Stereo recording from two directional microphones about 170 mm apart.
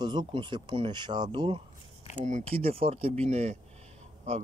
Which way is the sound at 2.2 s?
40° right (ahead or behind).